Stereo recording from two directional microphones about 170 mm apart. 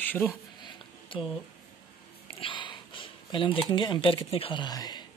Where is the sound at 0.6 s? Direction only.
30° left (ahead or behind).